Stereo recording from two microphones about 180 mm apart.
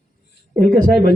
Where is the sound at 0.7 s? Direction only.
55° right (ahead or behind).